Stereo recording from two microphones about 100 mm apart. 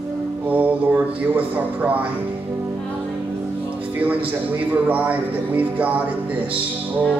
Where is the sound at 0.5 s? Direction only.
15° right (ahead or behind).